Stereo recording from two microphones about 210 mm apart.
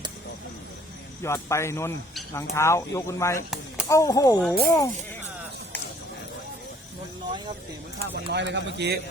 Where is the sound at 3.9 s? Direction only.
15° left (ahead or behind).